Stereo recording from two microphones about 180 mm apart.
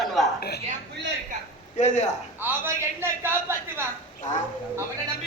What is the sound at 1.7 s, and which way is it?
Speech, 40° left (ahead or behind).